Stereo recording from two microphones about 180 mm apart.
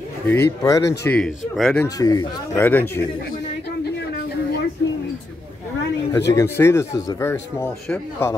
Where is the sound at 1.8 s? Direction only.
20° left (ahead or behind).